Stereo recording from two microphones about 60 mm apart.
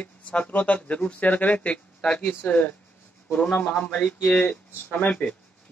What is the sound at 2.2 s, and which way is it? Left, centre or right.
Speech, left.